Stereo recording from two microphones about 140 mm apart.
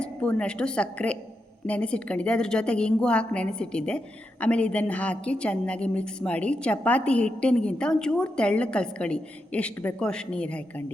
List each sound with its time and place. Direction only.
0.0 s a woman's voice: 10° left (ahead or behind)